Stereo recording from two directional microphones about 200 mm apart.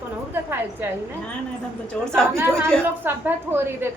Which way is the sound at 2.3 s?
10° right (ahead or behind).